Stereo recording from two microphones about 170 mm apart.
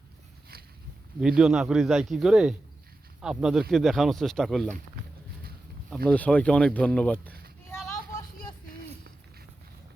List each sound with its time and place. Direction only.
1.2 s speech: centre (ahead or behind)
6.1 s speech: 10° left (ahead or behind)